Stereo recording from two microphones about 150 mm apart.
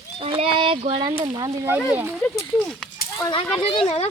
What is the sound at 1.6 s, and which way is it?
Speech, 10° right (ahead or behind).